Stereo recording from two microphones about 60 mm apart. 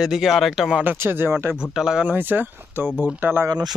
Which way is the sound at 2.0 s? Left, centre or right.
Right.